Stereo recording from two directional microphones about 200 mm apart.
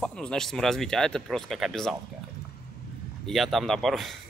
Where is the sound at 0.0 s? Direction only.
5° left (ahead or behind).